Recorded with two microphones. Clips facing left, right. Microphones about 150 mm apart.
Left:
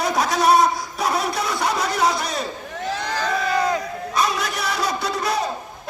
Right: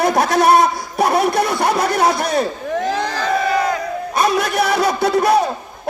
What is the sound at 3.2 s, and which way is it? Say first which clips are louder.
Crowd: right 4 dB; 60° right (ahead or behind).